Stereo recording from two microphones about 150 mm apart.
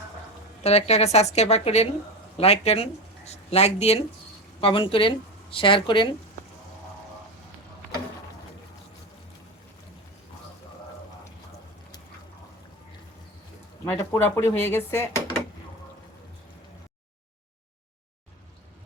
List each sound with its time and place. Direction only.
0.6 s a woman's voice: 45° left (ahead or behind)
13.8 s speech: 15° left (ahead or behind)